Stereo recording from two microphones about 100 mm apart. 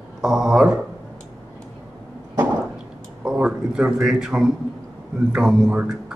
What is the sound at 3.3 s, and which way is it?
A man's voice, 10° right (ahead or behind).